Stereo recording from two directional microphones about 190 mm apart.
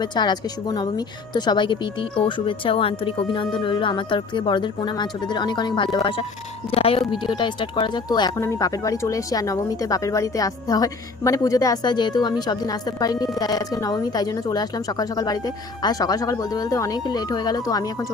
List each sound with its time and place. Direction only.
0.0 s speech: 25° left (ahead or behind)